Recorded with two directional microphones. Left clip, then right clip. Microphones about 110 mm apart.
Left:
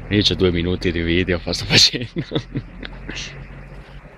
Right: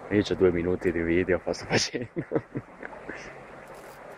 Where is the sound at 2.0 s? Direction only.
20° left (ahead or behind).